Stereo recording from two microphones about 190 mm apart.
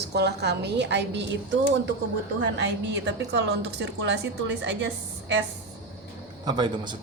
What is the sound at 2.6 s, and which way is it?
A woman's voice, 65° right (ahead or behind).